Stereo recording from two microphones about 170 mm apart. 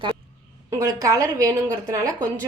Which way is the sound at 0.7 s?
20° right (ahead or behind).